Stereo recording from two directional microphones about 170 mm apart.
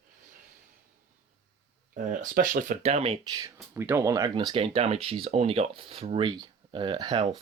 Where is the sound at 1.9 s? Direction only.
55° right (ahead or behind); by 3.4 s 35° right (ahead or behind).